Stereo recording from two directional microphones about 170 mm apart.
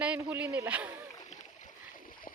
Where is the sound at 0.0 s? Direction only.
10° right (ahead or behind).